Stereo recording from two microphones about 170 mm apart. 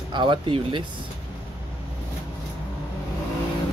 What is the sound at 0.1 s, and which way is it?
Speech, 30° right (ahead or behind).